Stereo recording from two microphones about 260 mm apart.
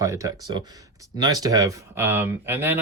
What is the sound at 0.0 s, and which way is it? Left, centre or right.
Speech, centre.